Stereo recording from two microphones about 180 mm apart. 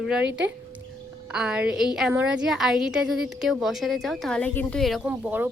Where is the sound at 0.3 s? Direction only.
75° right (ahead or behind).